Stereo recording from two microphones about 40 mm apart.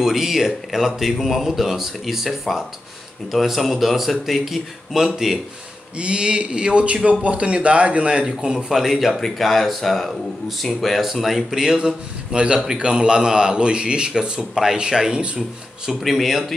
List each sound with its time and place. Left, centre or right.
0.0 s a man's voice: centre
5.9 s speech: right
8.7 s a man's voice: centre; by 15.4 s right
16.0 s a man's voice: centre